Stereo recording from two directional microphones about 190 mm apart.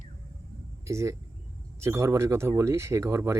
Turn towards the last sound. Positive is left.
turn(degrees=-15)  # may be behind; listen again after turning